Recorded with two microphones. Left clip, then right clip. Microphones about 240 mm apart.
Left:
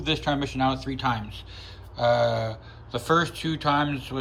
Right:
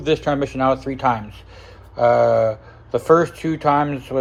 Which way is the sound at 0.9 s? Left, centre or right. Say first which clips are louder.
Right 6 dB; right.